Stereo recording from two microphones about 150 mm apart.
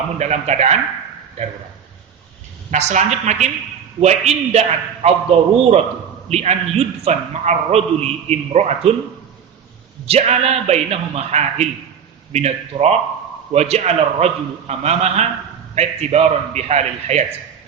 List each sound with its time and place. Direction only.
0.2 s a man's voice: 50° right (ahead or behind)
2.6 s a man's voice: 50° right (ahead or behind)
10.1 s a man's voice: 45° right (ahead or behind)